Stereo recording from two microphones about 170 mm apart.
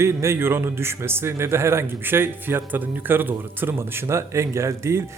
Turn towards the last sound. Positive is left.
turn(degrees=-15)  # may be behind; listen again after turning